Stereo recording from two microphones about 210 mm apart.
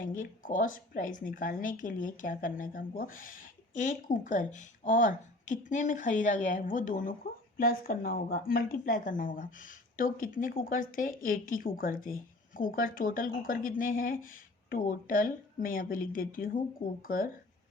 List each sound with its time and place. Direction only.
0.0 s speech: 40° left (ahead or behind)